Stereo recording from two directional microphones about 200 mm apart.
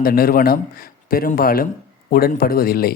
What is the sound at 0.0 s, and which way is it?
A man's voice, 45° left (ahead or behind).